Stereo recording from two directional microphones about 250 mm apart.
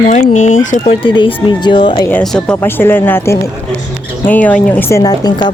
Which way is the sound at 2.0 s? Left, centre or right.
Centre.